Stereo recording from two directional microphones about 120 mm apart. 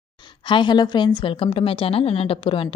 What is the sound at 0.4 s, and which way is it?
A woman's voice, 40° left (ahead or behind).